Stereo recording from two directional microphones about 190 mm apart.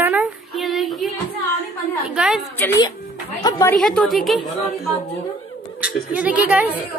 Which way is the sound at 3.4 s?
15° left (ahead or behind).